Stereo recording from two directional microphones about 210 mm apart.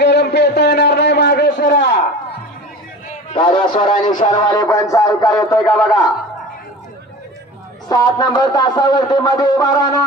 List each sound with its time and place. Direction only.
0.0 s a sound: 50° left (ahead or behind)
3.3 s speech: 25° left (ahead or behind)
7.9 s speech: 20° left (ahead or behind)